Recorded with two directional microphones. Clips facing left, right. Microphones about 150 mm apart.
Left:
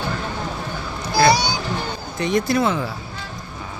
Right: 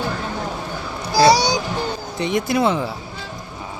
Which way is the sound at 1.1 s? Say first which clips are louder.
Right 3 dB; 35° right (ahead or behind).